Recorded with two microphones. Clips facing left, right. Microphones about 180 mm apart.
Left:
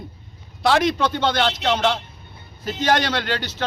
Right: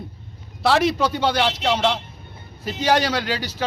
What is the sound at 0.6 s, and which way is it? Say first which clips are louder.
Speech: even; 5° right (ahead or behind).